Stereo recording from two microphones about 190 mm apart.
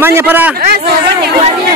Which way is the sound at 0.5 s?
55° right (ahead or behind).